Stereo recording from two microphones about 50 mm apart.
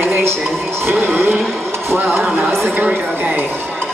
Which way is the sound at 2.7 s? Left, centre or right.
Right.